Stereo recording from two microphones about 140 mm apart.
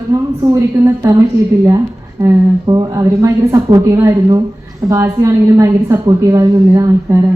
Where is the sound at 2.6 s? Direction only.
30° right (ahead or behind).